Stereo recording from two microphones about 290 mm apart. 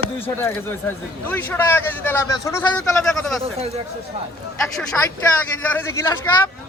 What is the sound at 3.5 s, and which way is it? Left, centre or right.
Speech, right.